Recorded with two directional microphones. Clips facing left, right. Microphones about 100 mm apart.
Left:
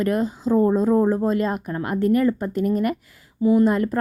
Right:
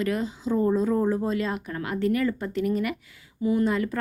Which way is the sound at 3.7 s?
45° left (ahead or behind).